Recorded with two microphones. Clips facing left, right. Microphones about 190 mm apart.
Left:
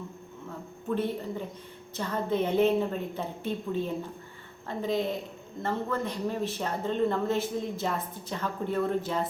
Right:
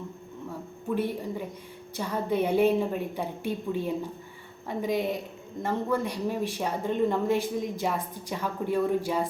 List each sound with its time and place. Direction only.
0.9 s speech: 10° right (ahead or behind)